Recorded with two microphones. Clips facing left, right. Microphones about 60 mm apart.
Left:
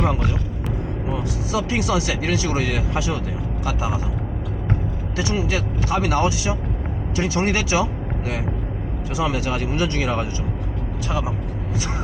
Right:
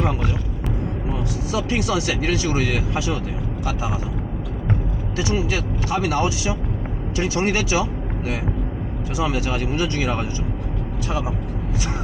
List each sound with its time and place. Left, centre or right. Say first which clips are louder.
1.5 s speech: left 1 dB; centre
2.6 s speech: right 1 dB; left
5.1 s speech: even; left
9.5 s speech: even; left